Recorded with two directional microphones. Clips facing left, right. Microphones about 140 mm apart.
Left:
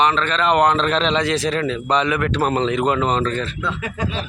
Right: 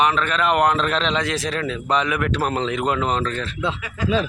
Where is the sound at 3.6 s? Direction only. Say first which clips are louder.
Right 1 dB; 25° right (ahead or behind).